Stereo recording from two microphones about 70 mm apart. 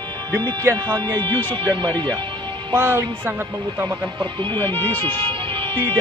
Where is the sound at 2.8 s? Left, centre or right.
Right.